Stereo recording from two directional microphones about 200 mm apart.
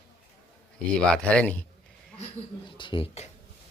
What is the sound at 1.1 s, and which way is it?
Speech, 5° left (ahead or behind).